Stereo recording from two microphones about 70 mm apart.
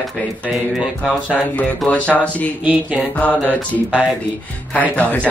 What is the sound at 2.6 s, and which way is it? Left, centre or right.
Speech, centre.